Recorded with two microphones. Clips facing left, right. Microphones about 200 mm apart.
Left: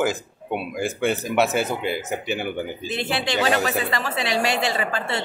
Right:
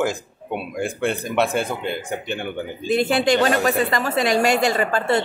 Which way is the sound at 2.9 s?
45° right (ahead or behind).